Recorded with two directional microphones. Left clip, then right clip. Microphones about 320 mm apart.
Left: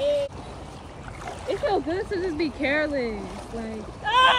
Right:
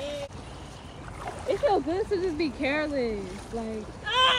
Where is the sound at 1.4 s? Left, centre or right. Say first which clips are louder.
Even; centre.